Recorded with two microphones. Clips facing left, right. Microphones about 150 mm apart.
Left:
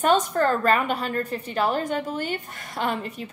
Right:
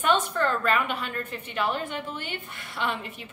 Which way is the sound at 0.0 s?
40° left (ahead or behind).